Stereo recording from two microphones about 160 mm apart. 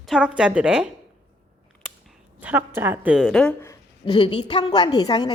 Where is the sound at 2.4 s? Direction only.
10° right (ahead or behind).